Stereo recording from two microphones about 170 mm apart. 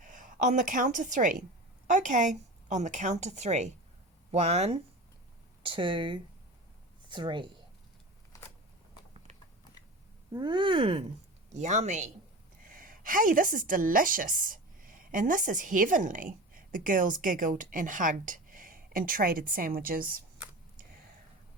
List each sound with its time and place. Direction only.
0.0 s a woman's voice: 50° right (ahead or behind)
5.6 s speech: 30° right (ahead or behind)
10.3 s speech: 25° right (ahead or behind)
11.5 s a woman's voice: 40° right (ahead or behind)
12.6 s a woman's voice: 55° right (ahead or behind)